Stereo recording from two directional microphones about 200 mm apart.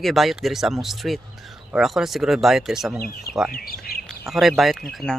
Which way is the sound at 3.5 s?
45° left (ahead or behind).